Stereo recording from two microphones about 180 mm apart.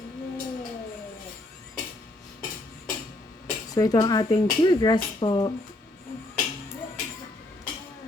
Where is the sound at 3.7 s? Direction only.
20° left (ahead or behind).